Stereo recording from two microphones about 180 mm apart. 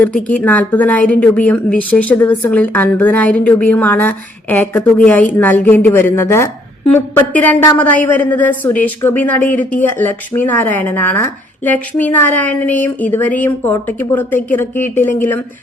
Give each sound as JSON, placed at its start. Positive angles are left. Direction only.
{"t": 0.0, "sound": "a woman's voice", "side_deg": 10}